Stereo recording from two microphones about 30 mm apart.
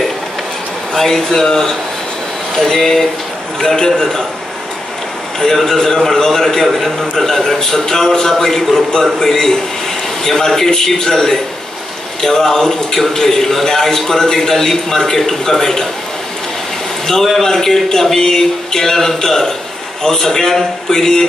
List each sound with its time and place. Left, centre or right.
0.9 s a man's voice: centre
5.4 s a man's voice: centre
6.6 s a man's voice: centre
8.5 s a man's voice: centre
17.4 s a man's voice: centre